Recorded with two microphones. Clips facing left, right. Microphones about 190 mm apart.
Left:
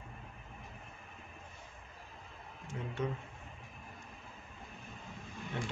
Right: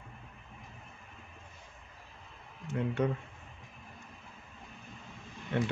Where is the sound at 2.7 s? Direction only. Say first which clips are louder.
Right 7 dB; 65° right (ahead or behind).